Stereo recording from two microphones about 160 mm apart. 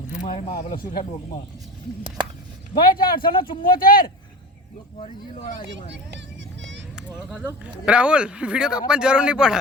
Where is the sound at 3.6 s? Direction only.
65° left (ahead or behind).